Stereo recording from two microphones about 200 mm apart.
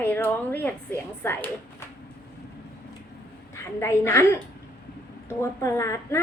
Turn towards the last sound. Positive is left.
turn(degrees=15)  # may be behind; listen again after turning